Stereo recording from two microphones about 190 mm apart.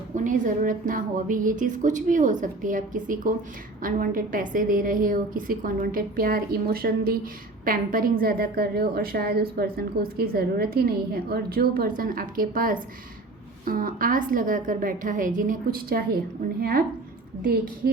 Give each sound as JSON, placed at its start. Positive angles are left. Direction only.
{"t": 0.3, "sound": "speech", "side_deg": -45}